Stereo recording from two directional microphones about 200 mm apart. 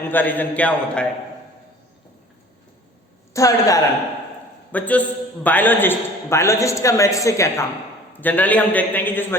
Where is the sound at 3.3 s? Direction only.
15° left (ahead or behind).